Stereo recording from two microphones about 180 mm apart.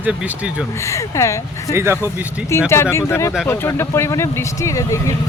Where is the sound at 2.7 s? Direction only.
15° left (ahead or behind).